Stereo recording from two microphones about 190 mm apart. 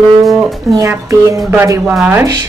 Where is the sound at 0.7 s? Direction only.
15° right (ahead or behind).